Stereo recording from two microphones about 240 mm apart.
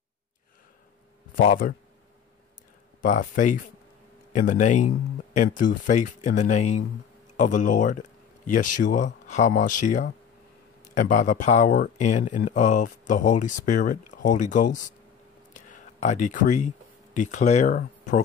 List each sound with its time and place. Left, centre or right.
1.3 s speech: left
3.0 s speech: left
15.5 s a sound: left
17.1 s speech: left